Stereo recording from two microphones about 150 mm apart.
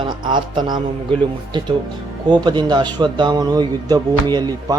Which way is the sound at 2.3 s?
30° right (ahead or behind).